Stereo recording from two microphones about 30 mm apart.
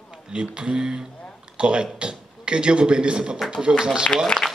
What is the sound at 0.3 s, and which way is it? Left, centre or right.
A man's voice, right.